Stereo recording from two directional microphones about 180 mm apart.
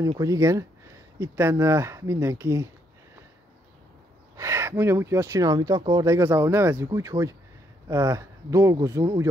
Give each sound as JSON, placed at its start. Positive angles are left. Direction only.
{"t": 0.2, "sound": "speech", "side_deg": -15}
{"t": 4.4, "sound": "speech", "side_deg": -15}